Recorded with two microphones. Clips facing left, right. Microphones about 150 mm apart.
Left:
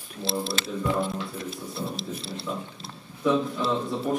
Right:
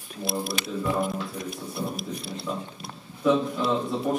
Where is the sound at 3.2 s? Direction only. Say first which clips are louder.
Right 1 dB; centre (ahead or behind).